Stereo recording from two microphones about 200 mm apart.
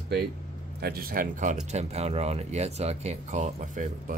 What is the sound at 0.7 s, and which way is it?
Speech, 50° right (ahead or behind).